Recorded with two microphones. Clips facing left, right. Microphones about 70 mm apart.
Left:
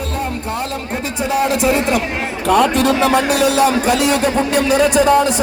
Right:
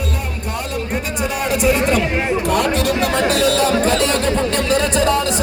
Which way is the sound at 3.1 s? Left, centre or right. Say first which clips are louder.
Left 2 dB; centre.